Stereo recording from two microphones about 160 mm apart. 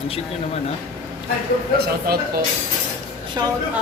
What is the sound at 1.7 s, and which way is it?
Speech, 75° right (ahead or behind).